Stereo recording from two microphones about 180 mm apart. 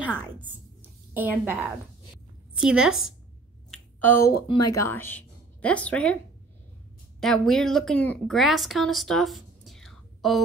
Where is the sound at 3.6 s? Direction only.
10° left (ahead or behind).